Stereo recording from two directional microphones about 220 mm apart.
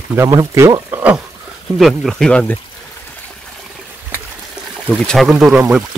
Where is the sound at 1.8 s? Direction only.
Centre (ahead or behind).